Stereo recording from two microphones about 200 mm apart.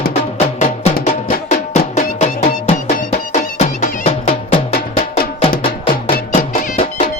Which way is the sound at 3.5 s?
35° left (ahead or behind).